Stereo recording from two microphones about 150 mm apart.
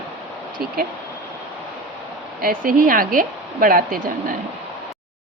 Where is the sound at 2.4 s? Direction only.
65° right (ahead or behind).